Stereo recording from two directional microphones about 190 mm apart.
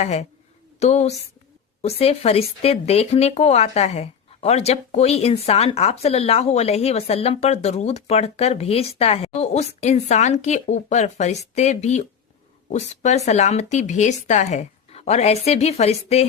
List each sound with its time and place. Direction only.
0.0 s speech: 35° left (ahead or behind)